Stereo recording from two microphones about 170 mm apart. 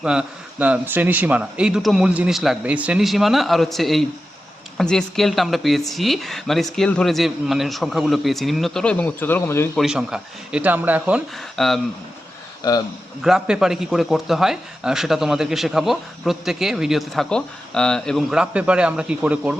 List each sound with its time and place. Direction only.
0.0 s speech: 5° right (ahead or behind); by 9.6 s 15° left (ahead or behind)
9.7 s speech: centre (ahead or behind)
11.5 s speech: centre (ahead or behind)
12.6 s a man's voice: 25° left (ahead or behind)
13.2 s speech: 5° right (ahead or behind)